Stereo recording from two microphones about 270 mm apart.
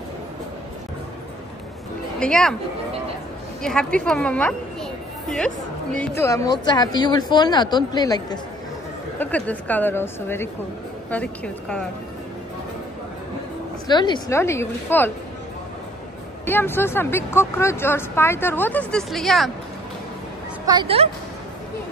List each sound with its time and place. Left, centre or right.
2.1 s speech: centre
3.6 s a woman's voice: centre
5.9 s a woman's voice: centre
13.8 s speech: centre
16.4 s speech: centre
20.6 s speech: centre